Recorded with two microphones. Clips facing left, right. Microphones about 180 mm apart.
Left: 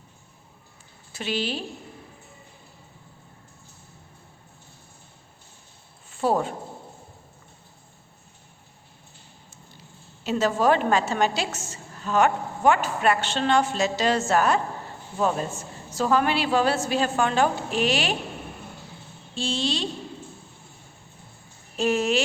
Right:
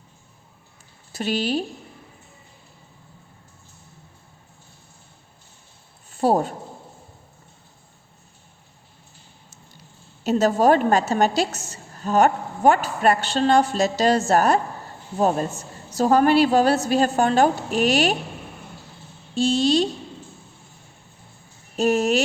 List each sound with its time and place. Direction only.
1.1 s a woman's voice: 40° right (ahead or behind)
6.1 s a sound: 40° right (ahead or behind)
10.2 s a woman's voice: 40° right (ahead or behind)
19.3 s a woman's voice: 40° right (ahead or behind)
21.8 s a woman's voice: 40° right (ahead or behind)